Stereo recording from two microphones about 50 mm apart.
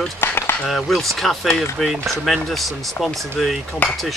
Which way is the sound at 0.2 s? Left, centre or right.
Left.